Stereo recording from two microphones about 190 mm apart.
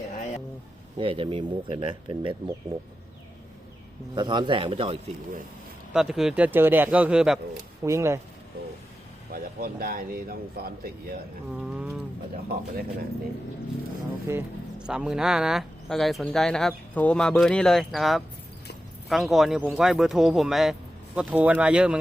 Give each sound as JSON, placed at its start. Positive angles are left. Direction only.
{"t": 0.9, "sound": "speech", "side_deg": -30}
{"t": 4.1, "sound": "speech", "side_deg": -25}
{"t": 5.9, "sound": "speech", "side_deg": -5}
{"t": 7.9, "sound": "speech", "side_deg": -15}
{"t": 9.3, "sound": "speech", "side_deg": -50}
{"t": 11.5, "sound": "speech", "side_deg": -5}
{"t": 12.5, "sound": "speech", "side_deg": -55}
{"t": 14.3, "sound": "speech", "side_deg": -10}